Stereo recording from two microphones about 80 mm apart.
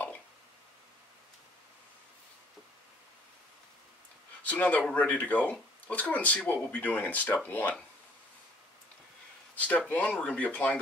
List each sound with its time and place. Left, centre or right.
4.5 s speech: centre
9.8 s speech: centre